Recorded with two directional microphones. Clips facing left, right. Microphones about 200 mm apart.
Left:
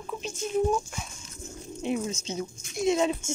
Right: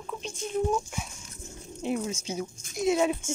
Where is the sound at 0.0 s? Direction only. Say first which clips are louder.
Left 2 dB; 5° left (ahead or behind).